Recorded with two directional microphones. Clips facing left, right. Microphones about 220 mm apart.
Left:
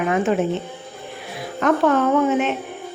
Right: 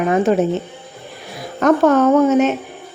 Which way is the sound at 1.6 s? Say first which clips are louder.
Right 5 dB; 40° right (ahead or behind).